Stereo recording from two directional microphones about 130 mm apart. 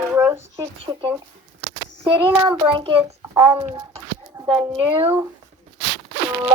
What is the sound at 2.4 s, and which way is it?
Speech, 40° right (ahead or behind).